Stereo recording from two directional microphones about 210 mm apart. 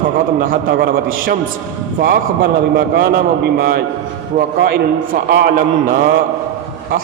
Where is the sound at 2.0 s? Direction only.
45° right (ahead or behind).